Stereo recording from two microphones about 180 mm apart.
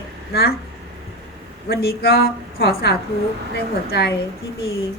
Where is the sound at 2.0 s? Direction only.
60° left (ahead or behind).